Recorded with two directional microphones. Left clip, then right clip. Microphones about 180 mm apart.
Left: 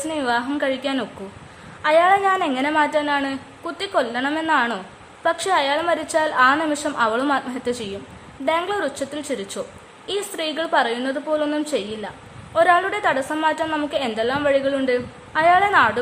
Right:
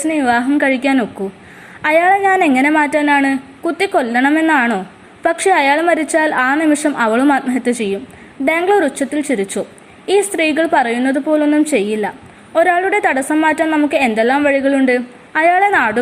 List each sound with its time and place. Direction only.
0.1 s a woman's voice: 15° right (ahead or behind)